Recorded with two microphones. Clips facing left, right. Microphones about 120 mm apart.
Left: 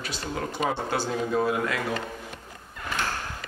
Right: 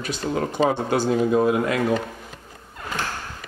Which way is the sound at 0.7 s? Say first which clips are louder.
Right 7 dB; 15° right (ahead or behind).